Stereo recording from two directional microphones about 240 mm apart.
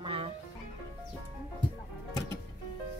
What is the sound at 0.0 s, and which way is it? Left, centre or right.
Music, right.